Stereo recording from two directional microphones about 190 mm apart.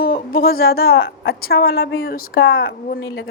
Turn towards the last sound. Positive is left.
turn(degrees=70)  # may be behind; listen again after turning